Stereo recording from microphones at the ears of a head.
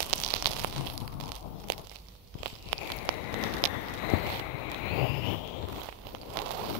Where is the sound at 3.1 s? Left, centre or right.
Left.